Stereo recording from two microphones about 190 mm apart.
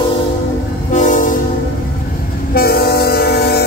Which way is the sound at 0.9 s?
40° left (ahead or behind).